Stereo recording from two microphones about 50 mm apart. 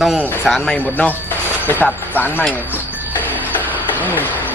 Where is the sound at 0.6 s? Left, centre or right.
Left.